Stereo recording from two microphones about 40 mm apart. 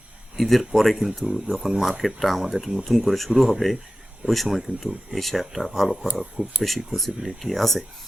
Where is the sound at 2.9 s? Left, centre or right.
Centre.